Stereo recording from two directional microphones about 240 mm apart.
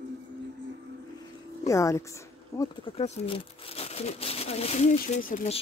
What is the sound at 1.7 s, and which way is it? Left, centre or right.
Speech, centre.